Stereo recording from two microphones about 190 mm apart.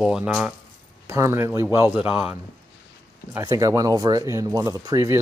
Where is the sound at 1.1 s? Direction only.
15° right (ahead or behind).